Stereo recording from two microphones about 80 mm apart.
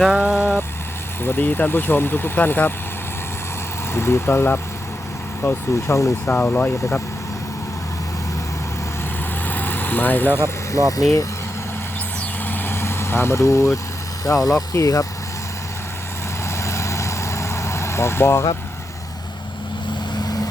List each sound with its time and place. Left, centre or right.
0.2 s vehicle: centre
1.2 s speech: left
3.9 s speech: left
9.5 s vehicle: left
10.7 s speech: left
12.5 s vehicle: left
14.3 s speech: left
16.6 s vehicle: left